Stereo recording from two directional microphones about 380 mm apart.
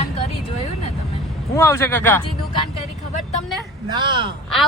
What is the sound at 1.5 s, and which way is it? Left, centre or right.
Speech, centre.